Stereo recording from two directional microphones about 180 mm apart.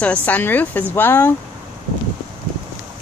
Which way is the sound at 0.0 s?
10° left (ahead or behind).